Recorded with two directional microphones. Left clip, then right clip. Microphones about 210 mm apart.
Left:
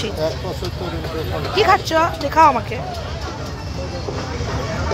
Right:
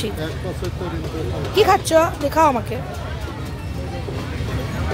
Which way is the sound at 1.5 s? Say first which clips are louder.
Right 1 dB; 20° right (ahead or behind).